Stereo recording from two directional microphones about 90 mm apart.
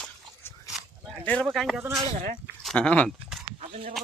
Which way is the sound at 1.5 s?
5° left (ahead or behind).